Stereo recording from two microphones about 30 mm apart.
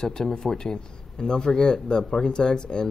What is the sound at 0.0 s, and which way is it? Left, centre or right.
Speech, left.